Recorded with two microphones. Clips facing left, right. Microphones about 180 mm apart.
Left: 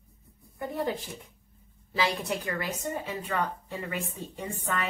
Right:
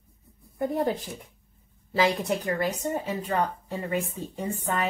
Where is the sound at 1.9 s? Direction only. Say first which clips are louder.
Right 5 dB; 45° right (ahead or behind).